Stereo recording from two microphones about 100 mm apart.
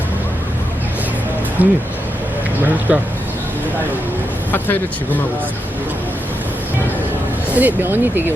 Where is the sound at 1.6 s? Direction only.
20° right (ahead or behind).